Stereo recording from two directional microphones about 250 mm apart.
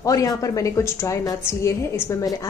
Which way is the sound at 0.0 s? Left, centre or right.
Centre.